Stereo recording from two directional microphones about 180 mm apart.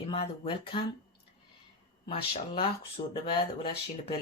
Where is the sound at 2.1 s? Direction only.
30° left (ahead or behind).